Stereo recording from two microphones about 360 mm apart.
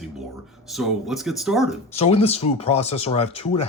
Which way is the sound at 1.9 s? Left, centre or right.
Centre.